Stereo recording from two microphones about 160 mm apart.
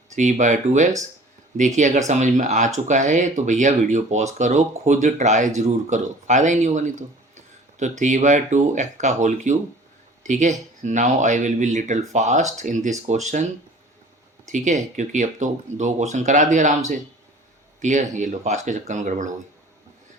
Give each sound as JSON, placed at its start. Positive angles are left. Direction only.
{"t": 0.2, "sound": "speech", "side_deg": -50}
{"t": 14.4, "sound": "speech", "side_deg": -50}